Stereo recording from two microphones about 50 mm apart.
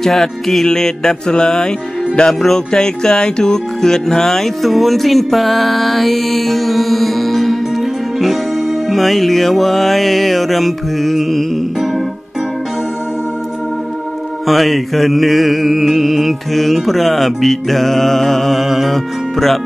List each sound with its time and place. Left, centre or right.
0.0 s mantra: centre
2.7 s speech: centre
8.8 s mantra: centre
14.5 s mantra: centre